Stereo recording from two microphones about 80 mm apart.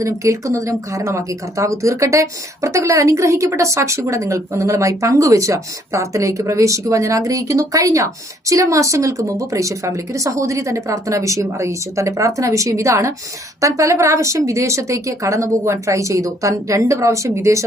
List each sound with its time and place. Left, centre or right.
0.0 s speech: right